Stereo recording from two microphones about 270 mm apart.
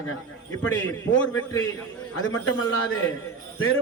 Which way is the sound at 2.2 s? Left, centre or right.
Left.